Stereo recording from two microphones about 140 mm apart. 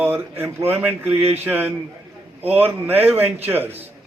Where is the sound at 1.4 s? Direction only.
15° right (ahead or behind).